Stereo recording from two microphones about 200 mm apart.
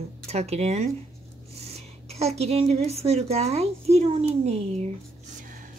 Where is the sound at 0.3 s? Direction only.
35° right (ahead or behind).